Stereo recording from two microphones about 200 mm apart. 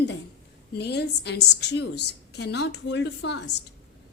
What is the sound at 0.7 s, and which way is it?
A woman's voice, 55° left (ahead or behind).